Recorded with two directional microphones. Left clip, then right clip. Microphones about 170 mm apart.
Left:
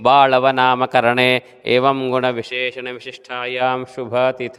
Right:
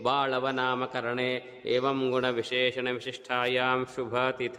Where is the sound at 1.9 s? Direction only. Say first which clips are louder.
Left 9 dB; 35° left (ahead or behind).